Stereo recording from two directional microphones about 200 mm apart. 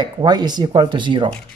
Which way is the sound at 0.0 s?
20° right (ahead or behind).